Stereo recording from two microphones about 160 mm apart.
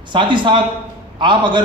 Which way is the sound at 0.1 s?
30° right (ahead or behind).